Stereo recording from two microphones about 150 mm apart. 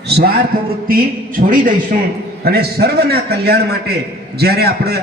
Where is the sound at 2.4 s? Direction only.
90° right.